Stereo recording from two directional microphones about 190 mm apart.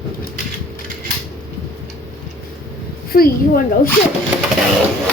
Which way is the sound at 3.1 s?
50° left (ahead or behind).